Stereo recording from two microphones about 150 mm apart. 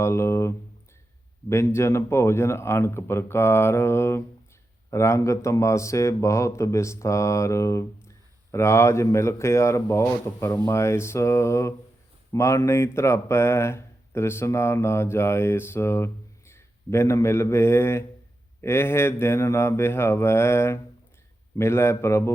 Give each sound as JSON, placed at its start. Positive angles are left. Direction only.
{"t": 0.0, "sound": "speech", "side_deg": 20}